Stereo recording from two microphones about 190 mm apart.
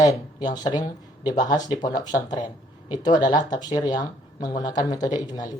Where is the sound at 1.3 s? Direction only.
40° left (ahead or behind).